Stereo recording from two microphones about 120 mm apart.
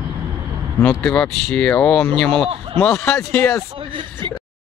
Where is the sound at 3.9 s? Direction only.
45° right (ahead or behind).